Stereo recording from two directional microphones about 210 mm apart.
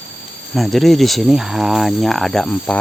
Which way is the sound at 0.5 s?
Centre (ahead or behind).